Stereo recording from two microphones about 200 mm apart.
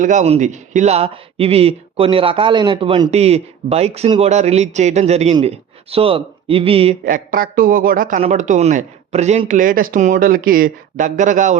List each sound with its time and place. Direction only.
0.0 s speech: 40° right (ahead or behind)
7.0 s a man's voice: 45° right (ahead or behind)